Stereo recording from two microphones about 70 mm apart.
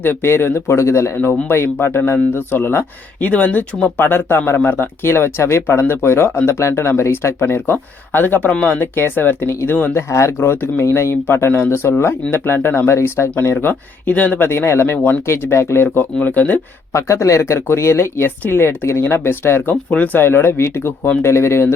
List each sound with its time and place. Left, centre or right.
0.0 s speech: left
1.1 s speech: left
1.5 s speech: left; by 8.8 s centre
8.8 s speech: left
9.9 s speech: left
14.1 s speech: left
14.4 s speech: left
14.9 s speech: left
15.3 s speech: left
16.2 s speech: left
16.9 s speech: left